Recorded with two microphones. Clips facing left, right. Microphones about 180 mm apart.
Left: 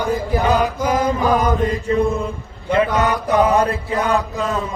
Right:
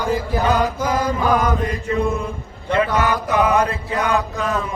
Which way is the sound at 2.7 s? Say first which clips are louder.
Left 1 dB; 25° left (ahead or behind).